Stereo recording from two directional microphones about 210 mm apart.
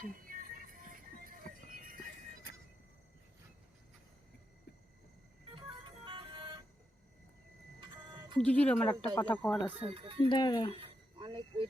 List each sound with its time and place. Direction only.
0.0 s music: 40° right (ahead or behind)
5.5 s music: 25° right (ahead or behind)
8.4 s speech: 5° left (ahead or behind)
9.8 s speech: 25° right (ahead or behind)
10.2 s speech: 20° left (ahead or behind)
11.2 s a sound: 25° right (ahead or behind)